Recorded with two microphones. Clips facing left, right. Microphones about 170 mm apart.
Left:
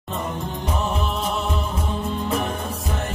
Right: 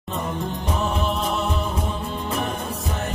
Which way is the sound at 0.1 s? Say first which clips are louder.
Right 1 dB; centre (ahead or behind).